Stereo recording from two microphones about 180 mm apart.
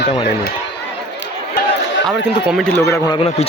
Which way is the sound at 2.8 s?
15° left (ahead or behind).